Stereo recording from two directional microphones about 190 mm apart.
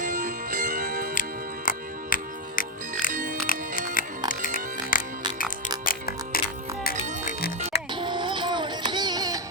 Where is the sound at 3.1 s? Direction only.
45° right (ahead or behind).